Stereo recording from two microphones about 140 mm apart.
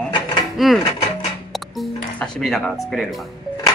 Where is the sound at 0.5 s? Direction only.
Centre (ahead or behind).